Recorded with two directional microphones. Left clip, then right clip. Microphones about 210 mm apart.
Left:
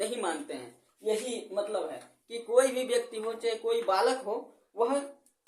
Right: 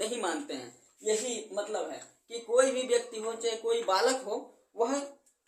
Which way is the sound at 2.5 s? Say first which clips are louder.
Even; 25° left (ahead or behind).